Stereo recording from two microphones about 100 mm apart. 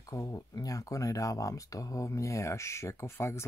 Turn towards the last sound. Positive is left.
turn(degrees=25)  # may be behind; listen again after turning